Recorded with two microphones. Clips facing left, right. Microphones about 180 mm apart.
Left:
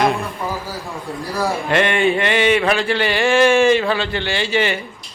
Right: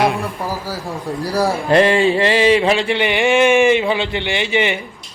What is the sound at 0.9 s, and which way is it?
A man's voice, 40° right (ahead or behind).